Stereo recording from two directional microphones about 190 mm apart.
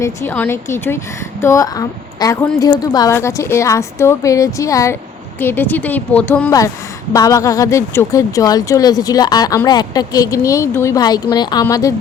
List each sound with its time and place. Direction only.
0.0 s speech: 15° left (ahead or behind)